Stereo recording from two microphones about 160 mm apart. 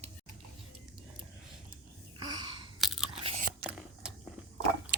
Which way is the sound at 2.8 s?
Centre (ahead or behind).